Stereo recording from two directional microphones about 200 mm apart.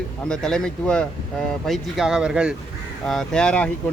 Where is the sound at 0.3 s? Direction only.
5° left (ahead or behind).